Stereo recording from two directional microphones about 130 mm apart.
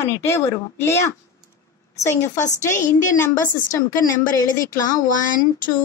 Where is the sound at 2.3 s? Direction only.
70° left (ahead or behind).